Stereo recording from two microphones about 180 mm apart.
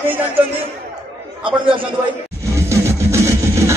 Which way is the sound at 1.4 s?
30° right (ahead or behind).